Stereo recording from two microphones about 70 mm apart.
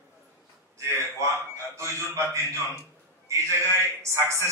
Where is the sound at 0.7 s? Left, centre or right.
Right.